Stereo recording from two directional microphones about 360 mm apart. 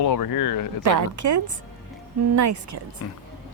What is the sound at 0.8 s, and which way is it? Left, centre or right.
A woman's voice, right.